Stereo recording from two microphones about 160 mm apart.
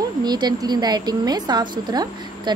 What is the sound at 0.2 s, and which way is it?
A woman's voice, 25° right (ahead or behind).